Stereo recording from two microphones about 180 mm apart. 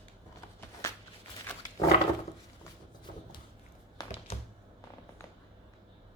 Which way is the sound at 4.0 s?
20° left (ahead or behind).